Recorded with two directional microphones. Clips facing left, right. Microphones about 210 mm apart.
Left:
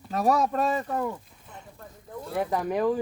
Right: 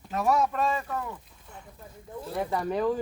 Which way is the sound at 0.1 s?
35° left (ahead or behind).